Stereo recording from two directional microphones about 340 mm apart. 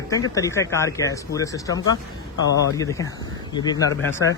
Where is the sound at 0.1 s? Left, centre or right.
Centre.